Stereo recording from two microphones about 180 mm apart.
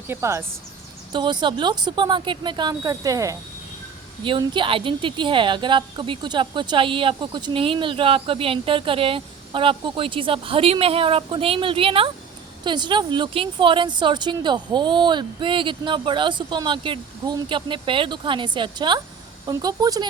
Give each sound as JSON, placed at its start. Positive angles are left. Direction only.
{"t": 0.1, "sound": "a woman's voice", "side_deg": -15}